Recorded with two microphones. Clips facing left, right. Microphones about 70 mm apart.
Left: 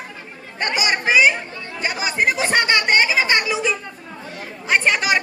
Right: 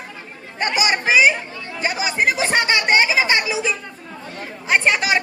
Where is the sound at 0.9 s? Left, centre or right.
Centre.